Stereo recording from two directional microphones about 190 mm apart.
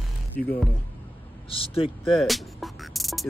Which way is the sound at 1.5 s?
30° left (ahead or behind).